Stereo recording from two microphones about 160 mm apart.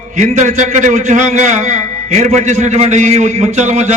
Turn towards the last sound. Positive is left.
turn(degrees=-45)  # may be behind; listen again after turning